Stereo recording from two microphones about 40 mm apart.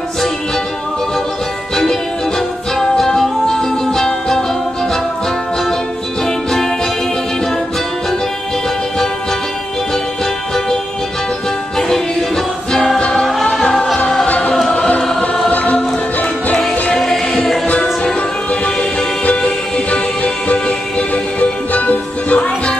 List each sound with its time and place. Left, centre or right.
1.8 s music: centre
6.2 s music: centre
12.7 s music: centre
14.2 s music: left
15.5 s music: left
17.0 s music: centre
18.5 s music: left
21.1 s music: left